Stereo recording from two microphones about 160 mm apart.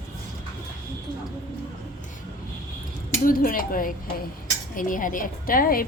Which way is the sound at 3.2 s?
60° left (ahead or behind).